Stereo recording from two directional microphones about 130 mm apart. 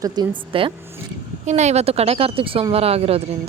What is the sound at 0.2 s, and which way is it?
Speech, 30° right (ahead or behind).